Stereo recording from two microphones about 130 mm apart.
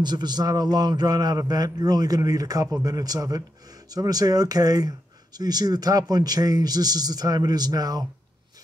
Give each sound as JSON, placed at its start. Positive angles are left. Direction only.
{"t": 0.0, "sound": "speech", "side_deg": -35}